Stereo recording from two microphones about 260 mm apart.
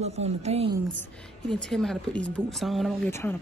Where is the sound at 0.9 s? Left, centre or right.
Centre.